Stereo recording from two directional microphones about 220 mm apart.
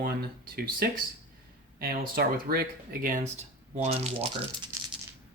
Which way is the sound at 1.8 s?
40° right (ahead or behind).